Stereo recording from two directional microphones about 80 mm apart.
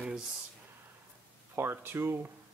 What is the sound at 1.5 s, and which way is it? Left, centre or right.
Speech, right.